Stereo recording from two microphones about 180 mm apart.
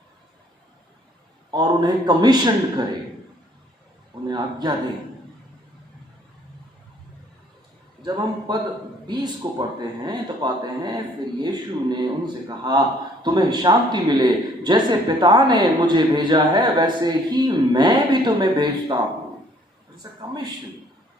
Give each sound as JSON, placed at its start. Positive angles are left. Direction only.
{"t": 1.5, "sound": "a man's voice", "side_deg": -25}
{"t": 4.3, "sound": "speech", "side_deg": -25}
{"t": 8.0, "sound": "a man's voice", "side_deg": -25}